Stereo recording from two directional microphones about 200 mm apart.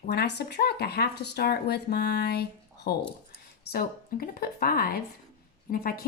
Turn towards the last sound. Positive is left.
turn(degrees=50)  # may be behind; listen again after turning